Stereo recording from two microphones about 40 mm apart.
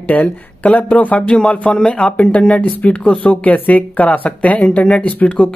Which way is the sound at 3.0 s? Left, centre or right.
Left.